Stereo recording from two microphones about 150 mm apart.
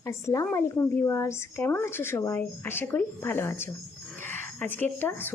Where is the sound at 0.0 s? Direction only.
20° left (ahead or behind).